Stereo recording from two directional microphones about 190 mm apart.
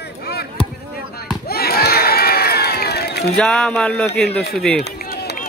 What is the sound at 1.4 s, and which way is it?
Crowd, 55° left (ahead or behind).